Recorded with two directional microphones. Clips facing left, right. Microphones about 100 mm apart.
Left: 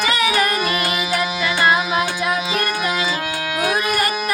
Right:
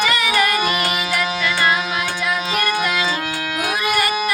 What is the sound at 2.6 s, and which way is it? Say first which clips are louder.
Music: right 1 dB; 5° left (ahead or behind).